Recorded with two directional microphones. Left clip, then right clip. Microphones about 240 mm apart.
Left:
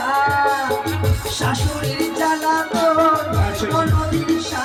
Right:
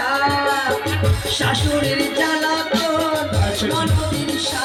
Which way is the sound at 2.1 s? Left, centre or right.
Left.